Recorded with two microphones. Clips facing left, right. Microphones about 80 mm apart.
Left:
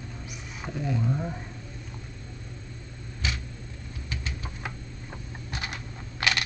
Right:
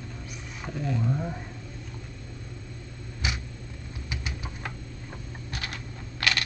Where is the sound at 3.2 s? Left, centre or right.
Centre.